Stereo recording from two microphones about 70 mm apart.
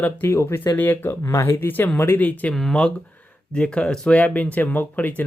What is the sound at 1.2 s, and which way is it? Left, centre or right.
Speech, left.